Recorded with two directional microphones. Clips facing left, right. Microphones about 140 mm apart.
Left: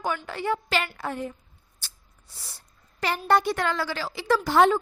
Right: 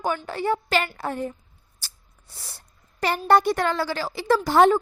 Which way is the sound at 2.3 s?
55° right (ahead or behind).